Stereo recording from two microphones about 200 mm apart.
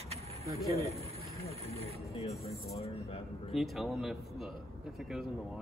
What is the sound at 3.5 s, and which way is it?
Speech, centre (ahead or behind).